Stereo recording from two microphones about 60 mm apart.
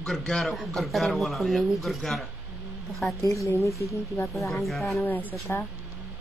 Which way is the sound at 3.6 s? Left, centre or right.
Left.